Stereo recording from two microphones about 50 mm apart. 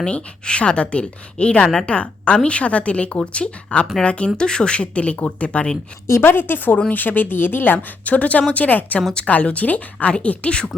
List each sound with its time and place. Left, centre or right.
0.0 s speech: left
6.1 s a woman's voice: left
6.5 s speech: left